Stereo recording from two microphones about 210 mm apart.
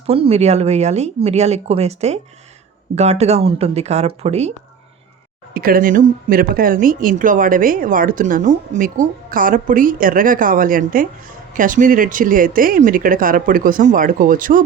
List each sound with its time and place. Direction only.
0.1 s speech: 30° right (ahead or behind)
5.5 s speech: 45° right (ahead or behind)